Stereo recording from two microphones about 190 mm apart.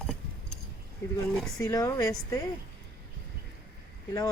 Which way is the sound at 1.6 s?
20° left (ahead or behind).